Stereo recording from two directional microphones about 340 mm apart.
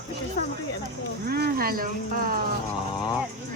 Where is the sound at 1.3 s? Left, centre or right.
Right.